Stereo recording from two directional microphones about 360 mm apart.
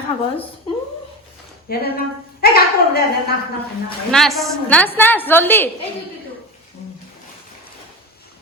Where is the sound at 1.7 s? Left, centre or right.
Left.